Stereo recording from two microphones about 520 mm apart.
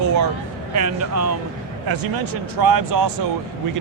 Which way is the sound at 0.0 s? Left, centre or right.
Right.